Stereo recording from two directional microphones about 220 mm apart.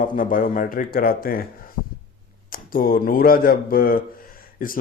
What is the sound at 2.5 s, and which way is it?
Speech, 40° left (ahead or behind).